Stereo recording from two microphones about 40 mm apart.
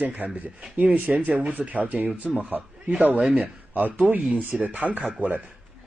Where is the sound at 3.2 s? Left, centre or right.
Right.